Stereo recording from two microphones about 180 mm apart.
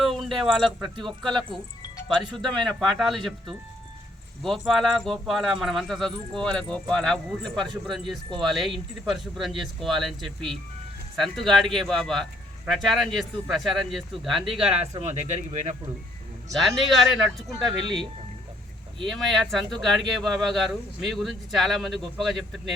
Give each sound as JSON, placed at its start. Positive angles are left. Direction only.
{"t": 0.0, "sound": "speech", "side_deg": 0}
{"t": 15.0, "sound": "speech", "side_deg": -40}
{"t": 16.5, "sound": "speech", "side_deg": 0}
{"t": 17.7, "sound": "speech", "side_deg": -25}
{"t": 19.4, "sound": "speech", "side_deg": 0}